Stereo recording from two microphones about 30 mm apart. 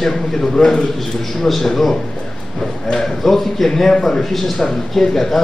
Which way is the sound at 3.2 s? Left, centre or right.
Centre.